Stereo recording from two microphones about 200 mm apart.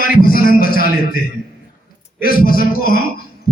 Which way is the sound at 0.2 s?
45° left (ahead or behind).